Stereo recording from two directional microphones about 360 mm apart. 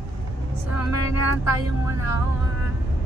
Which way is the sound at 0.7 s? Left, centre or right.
Left.